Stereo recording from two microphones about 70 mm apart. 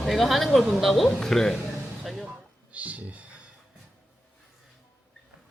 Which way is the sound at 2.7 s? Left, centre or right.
Right.